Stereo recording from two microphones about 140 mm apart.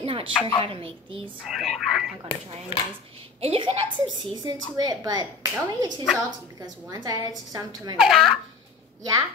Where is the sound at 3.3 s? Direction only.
40° right (ahead or behind); by 7.9 s 25° right (ahead or behind).